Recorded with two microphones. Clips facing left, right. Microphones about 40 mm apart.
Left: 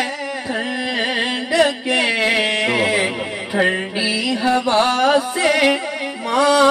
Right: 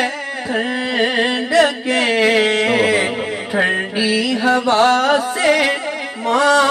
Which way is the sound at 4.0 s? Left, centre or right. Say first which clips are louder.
Right 4 dB; right.